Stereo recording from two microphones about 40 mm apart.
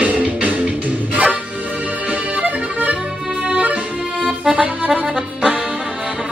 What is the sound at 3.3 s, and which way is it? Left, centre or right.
Accordion, right.